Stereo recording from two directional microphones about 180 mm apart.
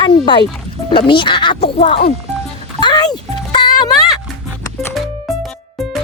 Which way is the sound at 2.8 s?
20° left (ahead or behind).